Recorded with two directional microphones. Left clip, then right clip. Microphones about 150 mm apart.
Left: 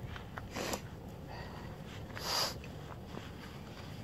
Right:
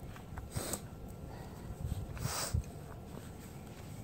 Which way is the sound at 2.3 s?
55° left (ahead or behind).